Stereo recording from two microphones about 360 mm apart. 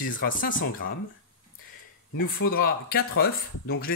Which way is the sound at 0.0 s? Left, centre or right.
Left.